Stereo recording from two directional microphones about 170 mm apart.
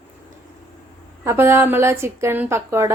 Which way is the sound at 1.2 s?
15° right (ahead or behind).